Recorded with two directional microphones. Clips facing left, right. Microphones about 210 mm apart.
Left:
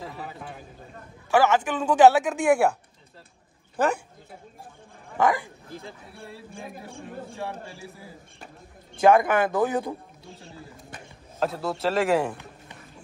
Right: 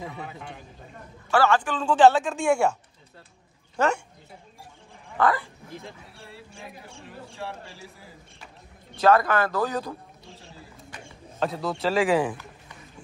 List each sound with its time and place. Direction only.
0.0 s a man's voice: centre (ahead or behind)
1.3 s a man's voice: 20° left (ahead or behind)
1.8 s a woman's voice: 10° left (ahead or behind)
5.1 s speech: 15° left (ahead or behind)
6.1 s speech: 50° left (ahead or behind)
9.0 s a man's voice: 15° left (ahead or behind)
11.3 s a man's voice: centre (ahead or behind)